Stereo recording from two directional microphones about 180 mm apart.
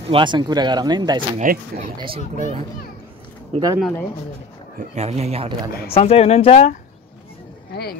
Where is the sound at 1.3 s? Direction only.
40° right (ahead or behind).